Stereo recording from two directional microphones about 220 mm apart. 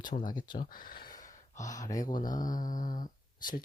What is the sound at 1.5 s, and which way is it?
Speech, 15° left (ahead or behind).